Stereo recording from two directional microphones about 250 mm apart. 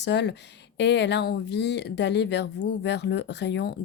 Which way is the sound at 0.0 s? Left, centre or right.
Left.